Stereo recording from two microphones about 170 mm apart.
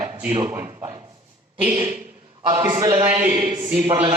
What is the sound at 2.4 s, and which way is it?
A man's voice, 20° right (ahead or behind).